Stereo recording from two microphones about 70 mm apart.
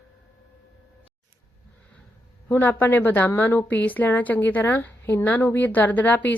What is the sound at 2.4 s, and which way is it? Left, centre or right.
Speech, left.